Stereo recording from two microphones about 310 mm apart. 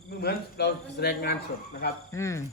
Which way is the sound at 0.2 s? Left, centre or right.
Left.